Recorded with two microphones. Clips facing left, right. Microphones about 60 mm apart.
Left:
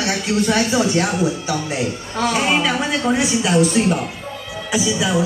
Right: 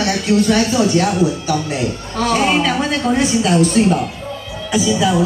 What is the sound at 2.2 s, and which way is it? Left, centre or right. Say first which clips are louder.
A woman's voice: right 3 dB; centre.